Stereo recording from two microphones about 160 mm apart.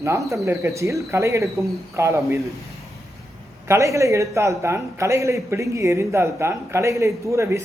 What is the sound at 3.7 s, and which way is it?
A man's voice, 20° right (ahead or behind).